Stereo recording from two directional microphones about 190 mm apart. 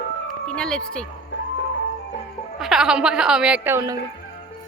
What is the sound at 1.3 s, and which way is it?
Music, 75° left (ahead or behind).